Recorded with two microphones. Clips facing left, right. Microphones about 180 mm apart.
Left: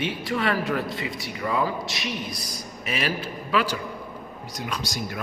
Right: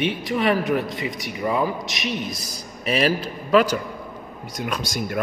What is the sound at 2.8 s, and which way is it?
A man's voice, 35° right (ahead or behind).